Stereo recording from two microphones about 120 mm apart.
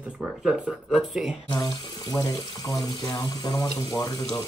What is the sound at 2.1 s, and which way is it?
Speech, 35° left (ahead or behind).